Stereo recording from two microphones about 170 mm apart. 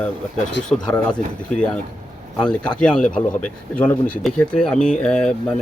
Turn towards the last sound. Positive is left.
turn(degrees=5)  # may be behind; listen again after turning